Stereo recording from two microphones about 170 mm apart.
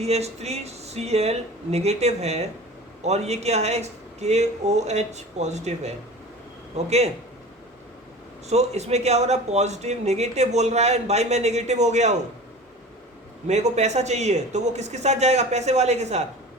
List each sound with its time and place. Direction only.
0.0 s speech: 40° right (ahead or behind)
8.4 s speech: 40° right (ahead or behind)
13.5 s speech: 40° right (ahead or behind)